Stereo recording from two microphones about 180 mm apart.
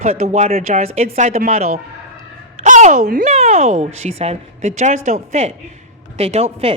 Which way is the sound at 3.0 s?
60° right (ahead or behind).